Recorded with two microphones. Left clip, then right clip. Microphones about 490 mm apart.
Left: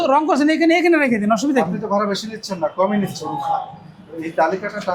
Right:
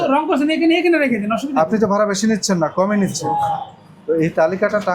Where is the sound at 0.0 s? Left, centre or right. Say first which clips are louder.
Left 1 dB; left.